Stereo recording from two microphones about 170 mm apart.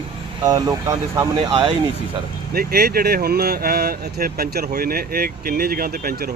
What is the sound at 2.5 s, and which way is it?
Speech, 65° right (ahead or behind).